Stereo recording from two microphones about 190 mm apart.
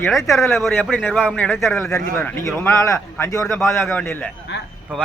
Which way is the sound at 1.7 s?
15° left (ahead or behind).